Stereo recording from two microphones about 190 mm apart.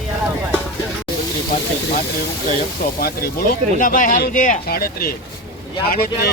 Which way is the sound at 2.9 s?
50° left (ahead or behind).